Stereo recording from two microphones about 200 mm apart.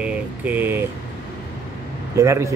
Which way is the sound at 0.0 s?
10° right (ahead or behind).